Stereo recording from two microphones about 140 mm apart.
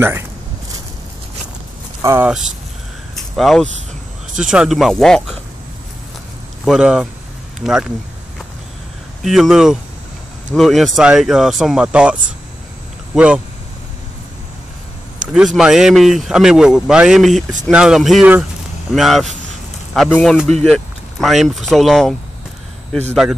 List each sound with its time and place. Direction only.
2.0 s a sound: 20° right (ahead or behind)
2.2 s speech: 5° right (ahead or behind)
6.6 s speech: 5° right (ahead or behind)
9.2 s speech: centre (ahead or behind)
15.3 s speech: 5° right (ahead or behind)